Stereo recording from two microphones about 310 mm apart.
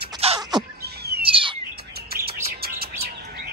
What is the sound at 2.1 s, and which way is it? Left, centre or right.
Bird, right.